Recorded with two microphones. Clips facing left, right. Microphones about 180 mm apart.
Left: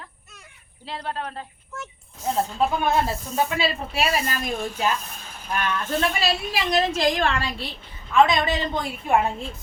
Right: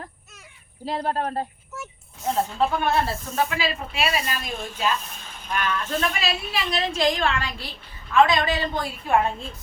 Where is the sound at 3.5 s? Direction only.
40° left (ahead or behind).